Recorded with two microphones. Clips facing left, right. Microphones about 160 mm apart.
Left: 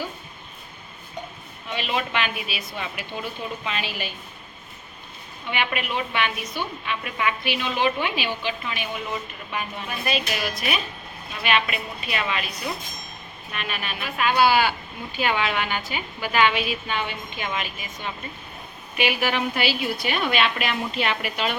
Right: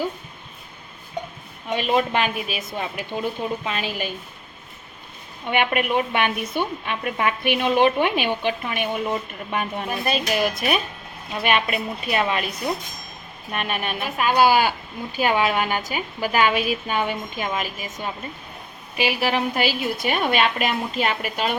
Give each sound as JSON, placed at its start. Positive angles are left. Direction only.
{"t": 1.7, "sound": "a woman's voice", "side_deg": -45}
{"t": 5.5, "sound": "a woman's voice", "side_deg": -50}
{"t": 13.5, "sound": "a woman's voice", "side_deg": -50}